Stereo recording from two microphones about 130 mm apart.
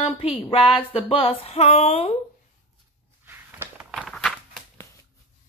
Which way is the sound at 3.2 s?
15° right (ahead or behind).